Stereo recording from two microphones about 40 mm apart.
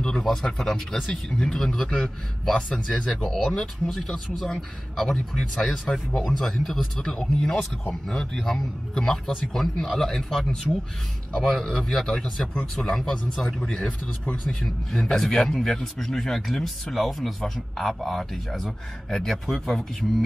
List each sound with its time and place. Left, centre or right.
0.2 s speech: centre
7.2 s speech: centre
14.4 s speech: centre